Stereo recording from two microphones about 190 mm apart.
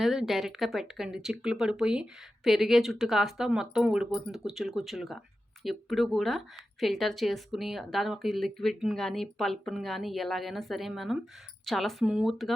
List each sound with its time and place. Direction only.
0.0 s speech: centre (ahead or behind)